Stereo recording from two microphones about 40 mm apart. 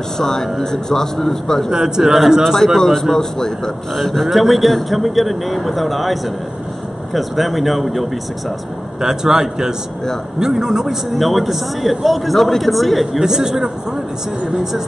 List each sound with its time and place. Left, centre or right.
0.2 s speech: centre
1.7 s speech: centre
2.4 s a man's voice: centre
7.2 s a man's voice: centre
9.0 s speech: centre
11.1 s a man's voice: centre
13.2 s speech: centre